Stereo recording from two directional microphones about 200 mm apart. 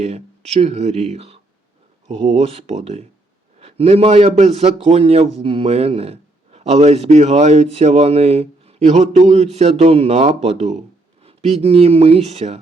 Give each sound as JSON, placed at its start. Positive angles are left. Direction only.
{"t": 0.0, "sound": "a man's voice", "side_deg": -30}